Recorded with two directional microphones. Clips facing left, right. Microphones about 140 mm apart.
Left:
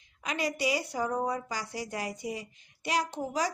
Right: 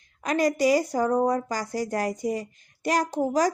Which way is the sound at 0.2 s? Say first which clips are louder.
Right 9 dB; 45° right (ahead or behind).